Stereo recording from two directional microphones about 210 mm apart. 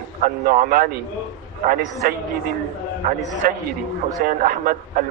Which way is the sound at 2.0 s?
45° right (ahead or behind).